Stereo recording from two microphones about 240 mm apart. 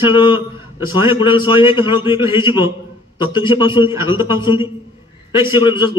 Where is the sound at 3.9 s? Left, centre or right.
Centre.